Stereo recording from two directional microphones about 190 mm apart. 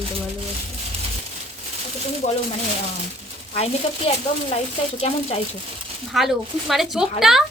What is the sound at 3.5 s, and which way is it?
Speech, 30° left (ahead or behind).